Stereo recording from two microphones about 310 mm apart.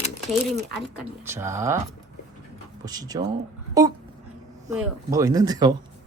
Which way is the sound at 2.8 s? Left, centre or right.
Centre.